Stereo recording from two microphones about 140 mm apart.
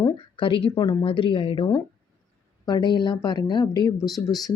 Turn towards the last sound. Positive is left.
turn(degrees=0)  # may be behind; listen again after turning